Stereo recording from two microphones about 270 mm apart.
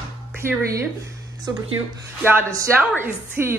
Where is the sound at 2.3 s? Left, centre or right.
Centre.